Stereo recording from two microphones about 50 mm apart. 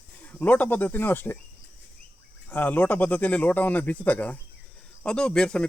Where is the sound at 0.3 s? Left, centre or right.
Left.